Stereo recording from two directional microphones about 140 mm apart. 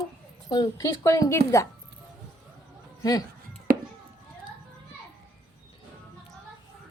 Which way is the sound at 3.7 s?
90° right.